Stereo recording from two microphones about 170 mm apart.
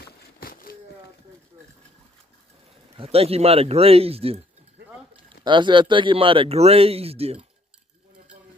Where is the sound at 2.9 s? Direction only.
35° right (ahead or behind).